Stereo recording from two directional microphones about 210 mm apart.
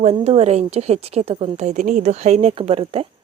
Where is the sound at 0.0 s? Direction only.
30° right (ahead or behind).